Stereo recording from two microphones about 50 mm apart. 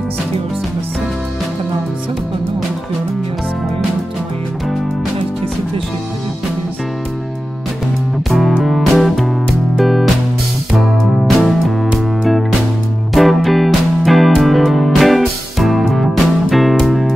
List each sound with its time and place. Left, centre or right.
8.3 s music: centre
13.1 s music: centre